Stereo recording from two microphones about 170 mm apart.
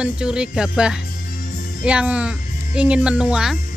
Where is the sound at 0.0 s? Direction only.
5° right (ahead or behind).